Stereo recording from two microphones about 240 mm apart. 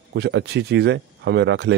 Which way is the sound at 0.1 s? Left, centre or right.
Right.